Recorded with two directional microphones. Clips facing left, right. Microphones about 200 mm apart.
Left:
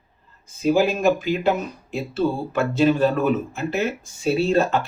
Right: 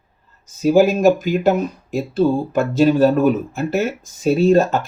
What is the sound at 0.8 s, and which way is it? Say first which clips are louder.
Speech: right 8 dB; 45° right (ahead or behind).